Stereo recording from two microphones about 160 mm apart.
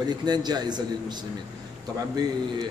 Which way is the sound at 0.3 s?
25° right (ahead or behind).